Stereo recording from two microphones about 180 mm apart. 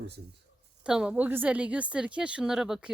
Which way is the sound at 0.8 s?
5° right (ahead or behind).